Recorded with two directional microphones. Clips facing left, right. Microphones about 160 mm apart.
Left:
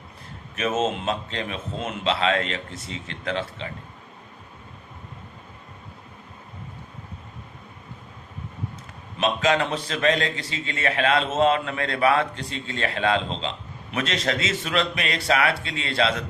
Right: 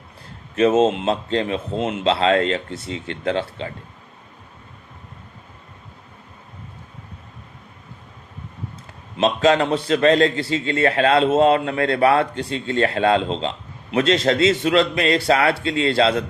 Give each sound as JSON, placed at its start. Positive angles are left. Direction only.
{"t": 0.5, "sound": "a man's voice", "side_deg": -30}
{"t": 9.2, "sound": "a man's voice", "side_deg": -30}